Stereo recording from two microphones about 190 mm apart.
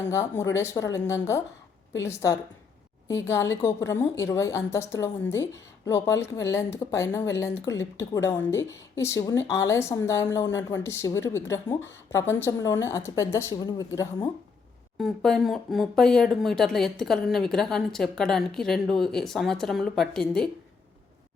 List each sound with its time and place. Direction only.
0.1 s a woman's voice: 15° left (ahead or behind)
14.9 s speech: centre (ahead or behind)